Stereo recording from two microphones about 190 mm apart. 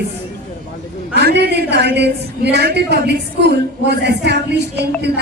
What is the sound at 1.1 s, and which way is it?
A woman's voice, 60° right (ahead or behind).